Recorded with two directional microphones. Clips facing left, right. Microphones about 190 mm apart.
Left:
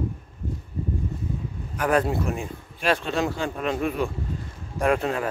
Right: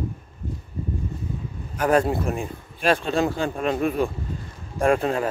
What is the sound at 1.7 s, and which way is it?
Speech, 40° right (ahead or behind).